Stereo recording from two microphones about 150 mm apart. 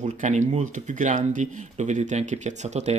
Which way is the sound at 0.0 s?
55° right (ahead or behind).